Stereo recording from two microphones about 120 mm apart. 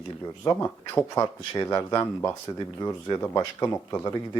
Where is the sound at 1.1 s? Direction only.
25° left (ahead or behind).